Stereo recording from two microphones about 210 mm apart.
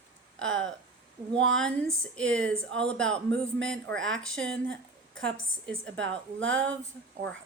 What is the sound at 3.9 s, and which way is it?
Speech, 65° right (ahead or behind).